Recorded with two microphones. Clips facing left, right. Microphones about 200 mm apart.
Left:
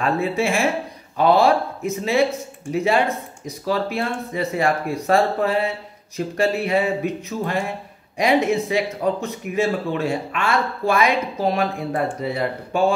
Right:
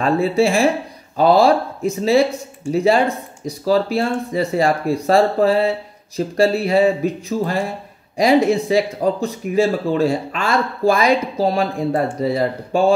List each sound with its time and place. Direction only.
0.0 s speech: 35° right (ahead or behind)